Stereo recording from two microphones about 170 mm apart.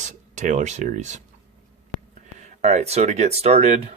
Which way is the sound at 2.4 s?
45° right (ahead or behind).